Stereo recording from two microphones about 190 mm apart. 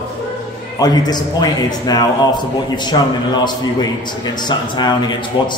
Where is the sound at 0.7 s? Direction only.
20° left (ahead or behind).